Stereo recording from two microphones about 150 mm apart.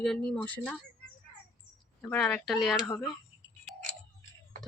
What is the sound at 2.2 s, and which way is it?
Speech, centre (ahead or behind).